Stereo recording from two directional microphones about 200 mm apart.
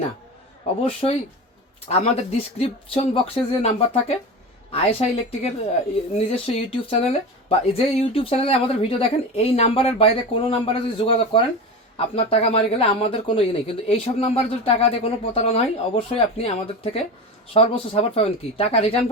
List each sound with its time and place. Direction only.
0.8 s speech: 30° left (ahead or behind)